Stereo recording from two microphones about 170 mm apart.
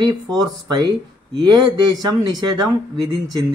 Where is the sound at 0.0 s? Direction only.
25° right (ahead or behind).